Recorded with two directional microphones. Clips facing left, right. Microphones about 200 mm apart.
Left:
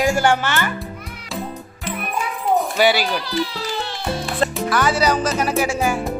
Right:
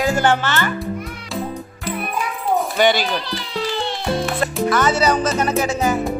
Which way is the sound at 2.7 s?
10° left (ahead or behind).